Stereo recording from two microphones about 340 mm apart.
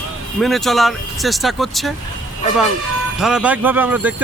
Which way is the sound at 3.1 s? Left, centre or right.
Centre.